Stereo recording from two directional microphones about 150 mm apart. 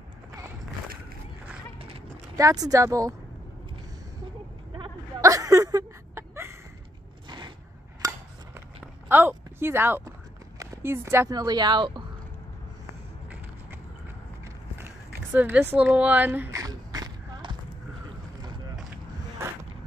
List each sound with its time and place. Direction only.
2.3 s speech: 25° right (ahead or behind)
5.2 s chuckle: 20° right (ahead or behind)
7.2 s a sound: 30° right (ahead or behind); by 10.1 s 15° right (ahead or behind)
10.6 s speech: 15° right (ahead or behind); by 12.0 s 30° right (ahead or behind)
15.3 s speech: 10° right (ahead or behind)
16.6 s a sound: 25° right (ahead or behind)